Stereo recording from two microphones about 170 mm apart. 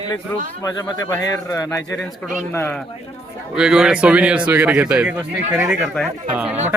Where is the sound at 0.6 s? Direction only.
20° left (ahead or behind).